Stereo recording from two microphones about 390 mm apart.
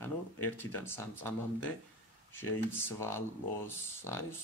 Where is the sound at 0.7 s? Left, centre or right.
Centre.